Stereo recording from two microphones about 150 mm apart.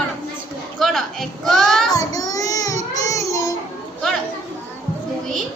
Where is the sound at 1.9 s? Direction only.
25° left (ahead or behind).